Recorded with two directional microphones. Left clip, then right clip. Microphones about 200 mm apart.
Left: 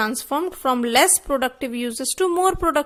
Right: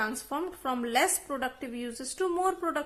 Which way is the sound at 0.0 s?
40° left (ahead or behind).